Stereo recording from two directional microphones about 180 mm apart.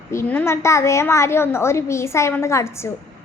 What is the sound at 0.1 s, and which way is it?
A woman's voice, 10° left (ahead or behind).